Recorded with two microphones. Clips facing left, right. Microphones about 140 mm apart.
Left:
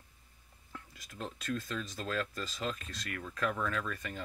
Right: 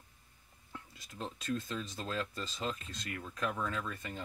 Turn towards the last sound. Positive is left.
turn(degrees=-25)  # may be behind; listen again after turning